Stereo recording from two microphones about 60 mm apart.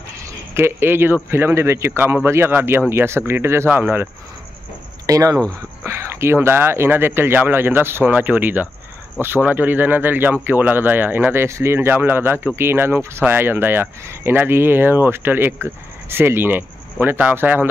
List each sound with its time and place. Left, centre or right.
0.6 s speech: right
5.0 s speech: right
5.9 s speech: right